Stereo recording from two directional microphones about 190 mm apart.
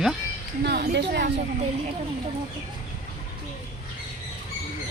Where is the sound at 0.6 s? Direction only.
60° right (ahead or behind).